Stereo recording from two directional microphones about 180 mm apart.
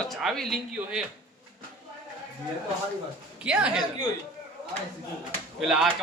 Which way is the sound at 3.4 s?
5° right (ahead or behind).